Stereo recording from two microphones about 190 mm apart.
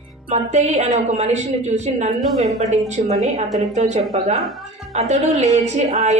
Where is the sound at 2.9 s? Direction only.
35° right (ahead or behind).